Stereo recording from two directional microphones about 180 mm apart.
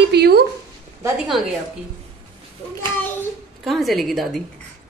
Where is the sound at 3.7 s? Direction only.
Centre (ahead or behind).